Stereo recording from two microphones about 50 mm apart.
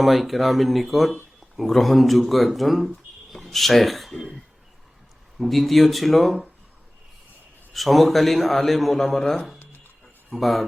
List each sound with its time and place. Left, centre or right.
0.0 s speech: centre
5.4 s speech: centre
7.7 s speech: centre